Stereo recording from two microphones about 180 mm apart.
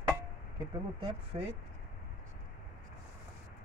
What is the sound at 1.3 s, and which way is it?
Speech, 35° right (ahead or behind).